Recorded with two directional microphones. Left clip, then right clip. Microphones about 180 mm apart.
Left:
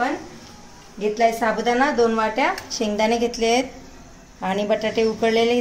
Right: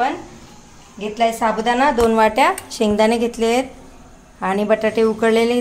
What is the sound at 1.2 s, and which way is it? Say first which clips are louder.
Speech: right 2 dB; 35° right (ahead or behind).